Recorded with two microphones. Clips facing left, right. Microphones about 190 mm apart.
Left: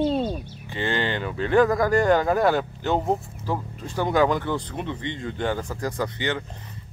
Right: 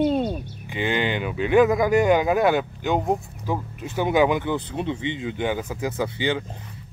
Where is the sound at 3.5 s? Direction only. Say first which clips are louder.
Right 1 dB; 5° right (ahead or behind).